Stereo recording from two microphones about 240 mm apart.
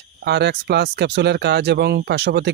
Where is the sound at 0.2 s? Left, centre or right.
Right.